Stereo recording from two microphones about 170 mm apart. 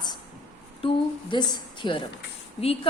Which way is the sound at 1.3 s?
30° left (ahead or behind).